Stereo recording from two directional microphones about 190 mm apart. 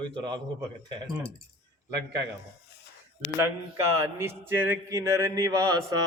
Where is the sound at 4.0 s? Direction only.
10° right (ahead or behind).